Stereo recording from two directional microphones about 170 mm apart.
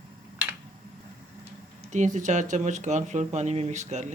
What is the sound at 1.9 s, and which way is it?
Speech, 45° right (ahead or behind).